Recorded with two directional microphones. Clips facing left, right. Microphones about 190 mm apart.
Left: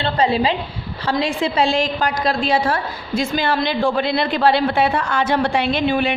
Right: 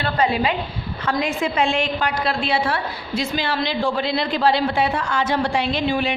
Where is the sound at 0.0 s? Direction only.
30° left (ahead or behind).